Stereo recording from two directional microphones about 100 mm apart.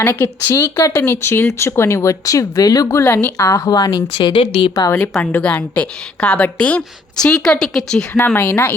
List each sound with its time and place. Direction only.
0.0 s speech: 25° left (ahead or behind); by 4.0 s 40° left (ahead or behind)
4.1 s speech: 55° left (ahead or behind)
5.2 s a woman's voice: 15° left (ahead or behind)
8.3 s speech: 15° left (ahead or behind)